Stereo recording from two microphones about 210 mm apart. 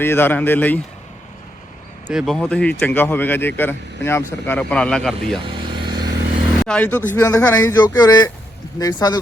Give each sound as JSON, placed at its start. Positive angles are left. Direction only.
{"t": 0.0, "sound": "speech", "side_deg": 10}
{"t": 2.0, "sound": "speech", "side_deg": 0}
{"t": 5.5, "sound": "vehicle", "side_deg": -20}
{"t": 6.7, "sound": "speech", "side_deg": 10}